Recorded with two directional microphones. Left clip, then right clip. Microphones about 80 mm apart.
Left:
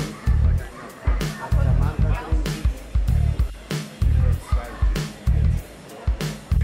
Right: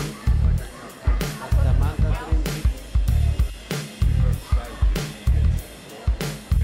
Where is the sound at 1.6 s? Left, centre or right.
Right.